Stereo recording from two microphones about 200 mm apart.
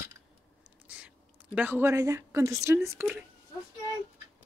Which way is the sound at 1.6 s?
10° right (ahead or behind).